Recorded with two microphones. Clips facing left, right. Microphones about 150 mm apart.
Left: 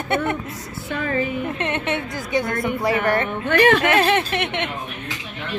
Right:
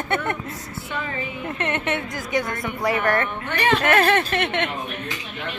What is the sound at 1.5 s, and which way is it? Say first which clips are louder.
A woman's voice: left 1 dB; 20° left (ahead or behind).